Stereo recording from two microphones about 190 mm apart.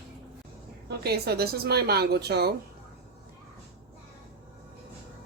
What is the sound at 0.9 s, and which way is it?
A woman's voice, 55° right (ahead or behind).